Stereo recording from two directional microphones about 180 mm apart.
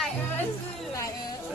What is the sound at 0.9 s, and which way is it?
Speech, 15° left (ahead or behind).